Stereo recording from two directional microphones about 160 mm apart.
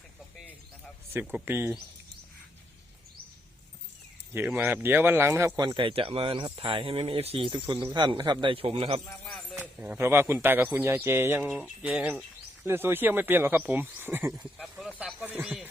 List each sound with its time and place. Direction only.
1.1 s speech: 10° right (ahead or behind)
4.4 s speech: 10° right (ahead or behind); by 9.0 s 35° right (ahead or behind)
9.2 s a sound: 5° left (ahead or behind)
9.6 s speech: 10° right (ahead or behind)
14.3 s speech: centre (ahead or behind)